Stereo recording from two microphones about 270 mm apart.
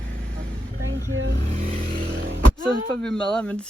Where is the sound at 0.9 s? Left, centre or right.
Right.